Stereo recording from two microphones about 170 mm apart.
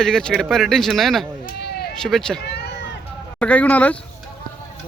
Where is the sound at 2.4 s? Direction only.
85° left.